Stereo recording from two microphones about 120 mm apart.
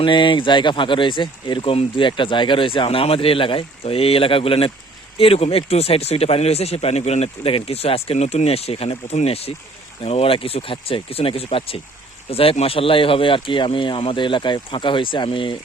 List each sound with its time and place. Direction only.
0.0 s speech: 40° left (ahead or behind)
2.0 s speech: 40° left (ahead or behind)